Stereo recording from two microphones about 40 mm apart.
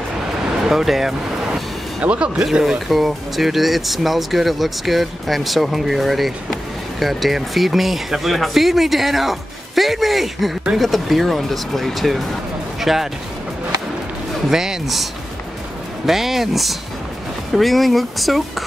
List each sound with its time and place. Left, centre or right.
0.7 s speech: centre
2.0 s speech: right
2.6 s speech: centre
14.5 s speech: centre
16.1 s speech: centre